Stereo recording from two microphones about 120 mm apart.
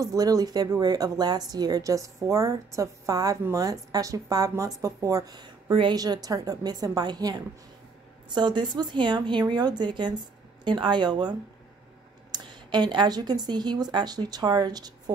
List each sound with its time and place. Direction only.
0.0 s speech: 30° right (ahead or behind)